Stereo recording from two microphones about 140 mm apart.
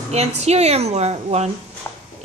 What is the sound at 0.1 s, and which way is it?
A woman's voice, 50° right (ahead or behind).